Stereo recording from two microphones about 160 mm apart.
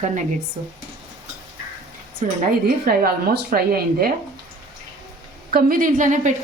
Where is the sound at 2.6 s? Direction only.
70° right (ahead or behind).